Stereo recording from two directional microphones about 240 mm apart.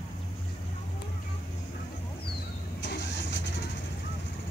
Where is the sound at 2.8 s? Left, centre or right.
Left.